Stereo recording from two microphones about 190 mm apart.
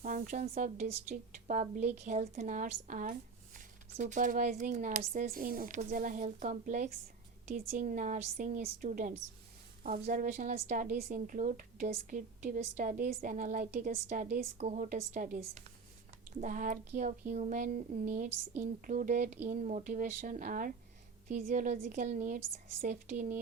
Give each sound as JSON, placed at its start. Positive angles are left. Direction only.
{"t": 0.0, "sound": "a woman's voice", "side_deg": -45}